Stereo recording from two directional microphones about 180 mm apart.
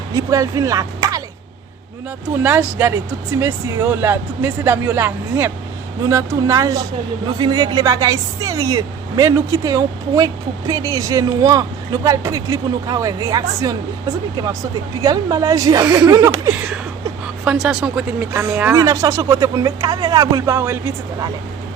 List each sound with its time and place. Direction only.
0.1 s speech: 20° right (ahead or behind)
2.4 s speech: 10° right (ahead or behind)
15.0 s speech: 20° right (ahead or behind)
17.4 s speech: 5° right (ahead or behind)
18.3 s speech: 15° right (ahead or behind)